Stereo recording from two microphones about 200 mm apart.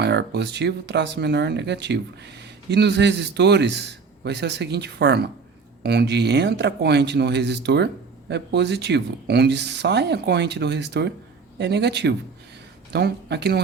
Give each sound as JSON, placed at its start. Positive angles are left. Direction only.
{"t": 0.0, "sound": "a man's voice", "side_deg": -55}